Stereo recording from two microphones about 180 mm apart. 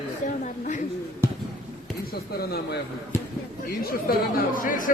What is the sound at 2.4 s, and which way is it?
Speech, 60° left (ahead or behind).